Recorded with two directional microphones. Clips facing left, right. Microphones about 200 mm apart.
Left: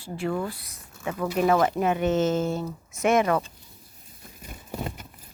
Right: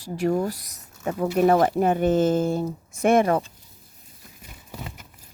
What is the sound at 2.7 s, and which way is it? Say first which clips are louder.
Speech: right 3 dB; 30° right (ahead or behind).